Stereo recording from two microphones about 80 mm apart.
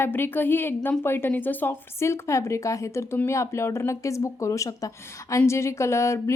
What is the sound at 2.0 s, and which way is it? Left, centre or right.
Speech, left.